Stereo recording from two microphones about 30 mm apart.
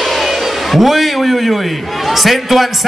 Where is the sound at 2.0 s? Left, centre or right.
Centre.